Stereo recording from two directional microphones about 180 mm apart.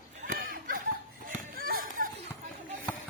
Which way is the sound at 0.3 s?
50° right (ahead or behind).